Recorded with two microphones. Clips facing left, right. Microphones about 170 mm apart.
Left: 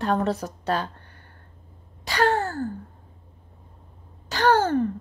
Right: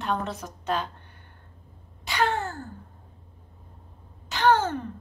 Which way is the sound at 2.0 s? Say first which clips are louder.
Left 4 dB; 40° left (ahead or behind).